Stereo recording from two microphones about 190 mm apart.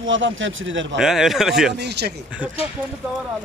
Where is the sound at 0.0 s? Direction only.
85° right.